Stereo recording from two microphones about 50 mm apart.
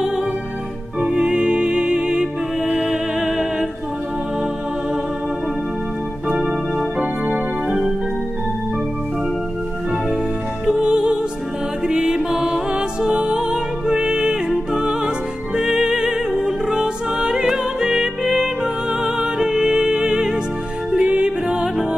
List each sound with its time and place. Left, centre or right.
0.9 s music: centre
10.6 s music: centre